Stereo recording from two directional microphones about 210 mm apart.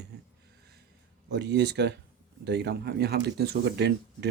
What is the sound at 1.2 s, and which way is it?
Speech, 55° right (ahead or behind).